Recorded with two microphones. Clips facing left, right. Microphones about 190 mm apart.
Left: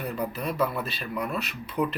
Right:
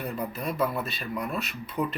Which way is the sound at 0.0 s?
Centre (ahead or behind).